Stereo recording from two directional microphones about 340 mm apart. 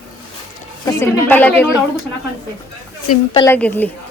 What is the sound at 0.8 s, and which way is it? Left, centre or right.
Speech, centre.